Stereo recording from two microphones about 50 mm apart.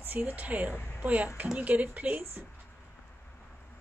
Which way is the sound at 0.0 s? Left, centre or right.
Right.